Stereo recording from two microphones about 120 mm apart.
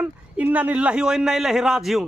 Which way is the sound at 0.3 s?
15° right (ahead or behind).